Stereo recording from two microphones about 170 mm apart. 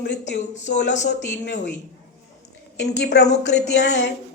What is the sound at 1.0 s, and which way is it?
Speech, 85° left.